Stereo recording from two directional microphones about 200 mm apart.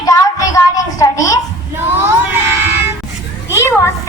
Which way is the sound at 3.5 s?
15° left (ahead or behind).